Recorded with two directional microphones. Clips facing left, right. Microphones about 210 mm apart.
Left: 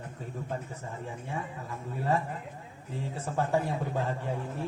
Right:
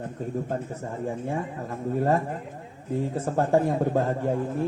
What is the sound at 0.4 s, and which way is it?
Speech, 45° right (ahead or behind).